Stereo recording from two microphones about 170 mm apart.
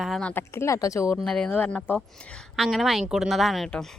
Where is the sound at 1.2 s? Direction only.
5° left (ahead or behind).